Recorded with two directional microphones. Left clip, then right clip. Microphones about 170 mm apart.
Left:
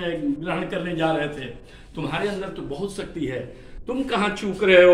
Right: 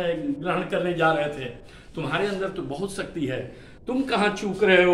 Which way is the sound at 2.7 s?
30° right (ahead or behind).